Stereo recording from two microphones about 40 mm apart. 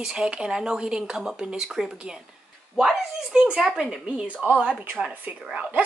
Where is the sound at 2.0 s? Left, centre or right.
Right.